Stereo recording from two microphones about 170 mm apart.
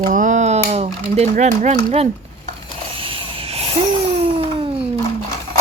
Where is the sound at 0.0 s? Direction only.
50° right (ahead or behind); by 4.7 s 35° right (ahead or behind).